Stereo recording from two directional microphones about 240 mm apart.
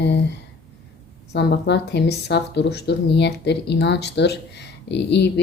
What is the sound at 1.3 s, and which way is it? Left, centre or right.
Speech, left.